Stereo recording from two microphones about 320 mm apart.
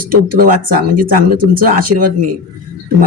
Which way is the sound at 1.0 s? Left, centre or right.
Right.